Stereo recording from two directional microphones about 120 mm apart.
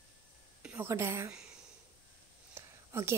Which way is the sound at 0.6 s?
10° right (ahead or behind).